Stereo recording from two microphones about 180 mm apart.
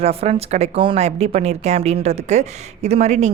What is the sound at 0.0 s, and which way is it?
A woman's voice, 35° right (ahead or behind).